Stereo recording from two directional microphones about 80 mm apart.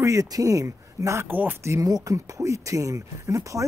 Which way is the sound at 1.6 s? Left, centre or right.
Right.